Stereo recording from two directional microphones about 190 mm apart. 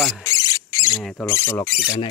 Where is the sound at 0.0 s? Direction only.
5° left (ahead or behind).